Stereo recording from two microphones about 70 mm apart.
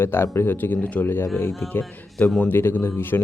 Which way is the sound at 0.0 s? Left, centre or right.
Left.